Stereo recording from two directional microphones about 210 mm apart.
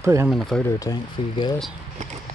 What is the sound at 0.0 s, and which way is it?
Speech, 15° right (ahead or behind).